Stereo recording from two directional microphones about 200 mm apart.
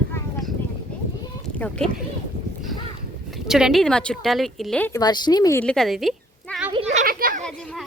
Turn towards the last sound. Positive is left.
turn(degrees=5)  # may be behind; listen again after turning